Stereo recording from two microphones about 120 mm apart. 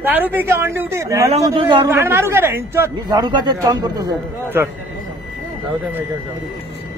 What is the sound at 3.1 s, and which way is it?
A man's voice, 35° right (ahead or behind).